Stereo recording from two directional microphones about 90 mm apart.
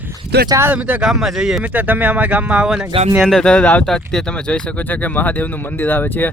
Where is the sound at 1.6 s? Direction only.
20° right (ahead or behind).